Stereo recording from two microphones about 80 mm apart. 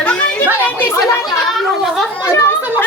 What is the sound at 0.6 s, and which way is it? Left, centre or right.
Speech, left.